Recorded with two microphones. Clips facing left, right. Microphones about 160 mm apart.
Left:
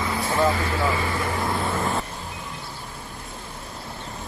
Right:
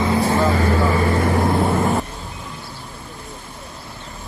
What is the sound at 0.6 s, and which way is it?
Speech, 55° right (ahead or behind).